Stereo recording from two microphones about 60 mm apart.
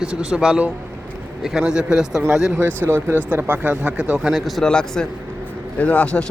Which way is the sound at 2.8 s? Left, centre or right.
Right.